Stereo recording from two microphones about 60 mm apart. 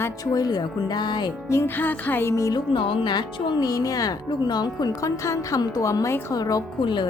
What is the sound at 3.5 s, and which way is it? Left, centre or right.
Speech, left.